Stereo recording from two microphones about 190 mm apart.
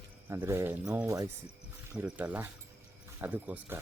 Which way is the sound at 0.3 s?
15° right (ahead or behind).